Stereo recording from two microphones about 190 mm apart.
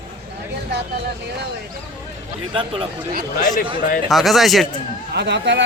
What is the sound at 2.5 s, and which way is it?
Speech, 25° right (ahead or behind).